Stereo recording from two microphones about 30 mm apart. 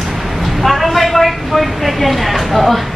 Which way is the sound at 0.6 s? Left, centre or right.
Centre.